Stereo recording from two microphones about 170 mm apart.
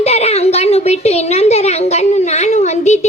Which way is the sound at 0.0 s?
40° left (ahead or behind).